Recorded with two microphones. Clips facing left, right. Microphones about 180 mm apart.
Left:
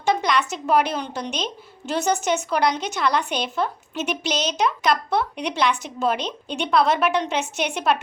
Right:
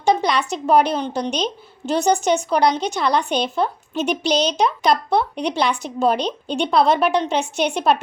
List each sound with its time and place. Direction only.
0.0 s a woman's voice: 30° right (ahead or behind)